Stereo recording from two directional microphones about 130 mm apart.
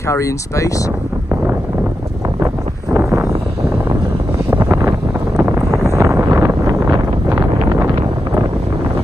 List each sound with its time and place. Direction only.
0.1 s speech: 25° left (ahead or behind)
2.4 s a sound: 20° right (ahead or behind)
4.5 s vehicle: 20° right (ahead or behind)